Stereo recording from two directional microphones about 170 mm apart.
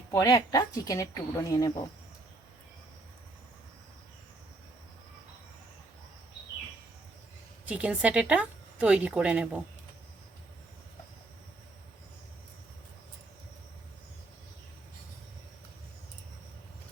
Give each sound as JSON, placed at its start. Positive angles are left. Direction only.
{"t": 0.1, "sound": "speech", "side_deg": 20}
{"t": 7.6, "sound": "speech", "side_deg": -10}